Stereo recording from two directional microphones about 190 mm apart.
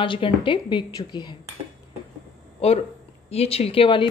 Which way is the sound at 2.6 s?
30° left (ahead or behind).